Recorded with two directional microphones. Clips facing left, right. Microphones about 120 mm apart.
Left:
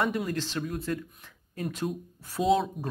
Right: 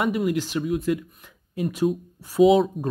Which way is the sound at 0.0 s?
5° right (ahead or behind).